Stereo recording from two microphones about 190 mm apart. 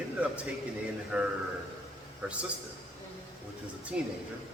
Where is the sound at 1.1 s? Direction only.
5° right (ahead or behind).